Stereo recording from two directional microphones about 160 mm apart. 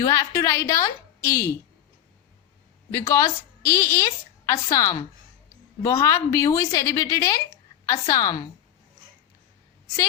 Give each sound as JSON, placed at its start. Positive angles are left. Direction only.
{"t": 0.0, "sound": "a woman's voice", "side_deg": 20}
{"t": 2.9, "sound": "a woman's voice", "side_deg": 20}